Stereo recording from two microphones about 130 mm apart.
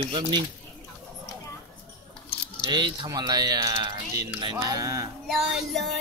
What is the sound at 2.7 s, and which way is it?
Speech, 35° right (ahead or behind).